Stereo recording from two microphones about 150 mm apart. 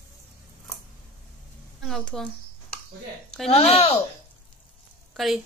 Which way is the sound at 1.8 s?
Centre (ahead or behind).